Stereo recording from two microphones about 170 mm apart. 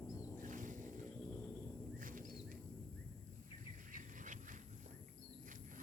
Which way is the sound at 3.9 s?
50° right (ahead or behind).